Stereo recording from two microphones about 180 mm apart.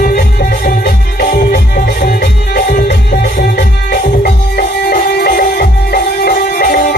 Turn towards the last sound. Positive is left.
turn(degrees=55)  # may be behind; listen again after turning